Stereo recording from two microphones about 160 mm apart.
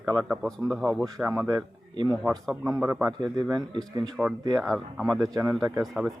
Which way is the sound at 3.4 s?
25° right (ahead or behind).